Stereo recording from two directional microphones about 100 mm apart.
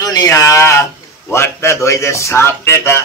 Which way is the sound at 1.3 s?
25° left (ahead or behind).